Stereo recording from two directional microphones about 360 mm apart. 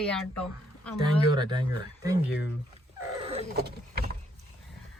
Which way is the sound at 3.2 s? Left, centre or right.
Centre.